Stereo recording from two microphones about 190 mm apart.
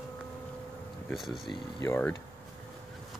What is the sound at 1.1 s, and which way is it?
Speech, centre (ahead or behind).